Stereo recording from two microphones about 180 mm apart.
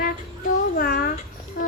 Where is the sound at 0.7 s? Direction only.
60° left (ahead or behind).